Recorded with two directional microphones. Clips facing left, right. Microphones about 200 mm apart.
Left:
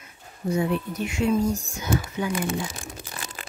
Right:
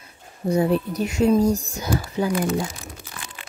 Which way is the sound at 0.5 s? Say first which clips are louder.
Right 5 dB; 35° right (ahead or behind).